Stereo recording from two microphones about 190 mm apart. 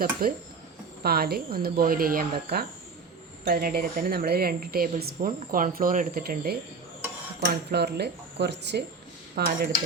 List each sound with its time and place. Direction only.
0.2 s speech: 50° right (ahead or behind)
7.7 s speech: 60° right (ahead or behind)
9.3 s dishes: 50° right (ahead or behind)